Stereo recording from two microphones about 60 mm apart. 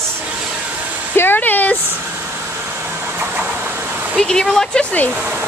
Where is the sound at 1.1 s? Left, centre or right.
Left.